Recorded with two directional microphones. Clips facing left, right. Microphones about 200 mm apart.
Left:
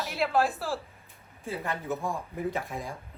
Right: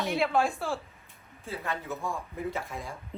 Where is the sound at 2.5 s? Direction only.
15° left (ahead or behind).